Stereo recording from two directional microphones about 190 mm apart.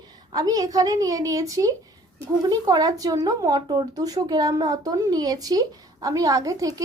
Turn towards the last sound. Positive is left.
turn(degrees=-20)  # may be behind; listen again after turning